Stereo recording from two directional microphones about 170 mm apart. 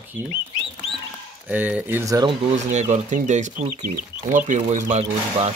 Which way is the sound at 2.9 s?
45° right (ahead or behind).